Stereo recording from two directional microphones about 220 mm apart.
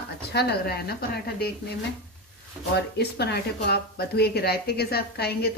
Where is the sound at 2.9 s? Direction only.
50° left (ahead or behind).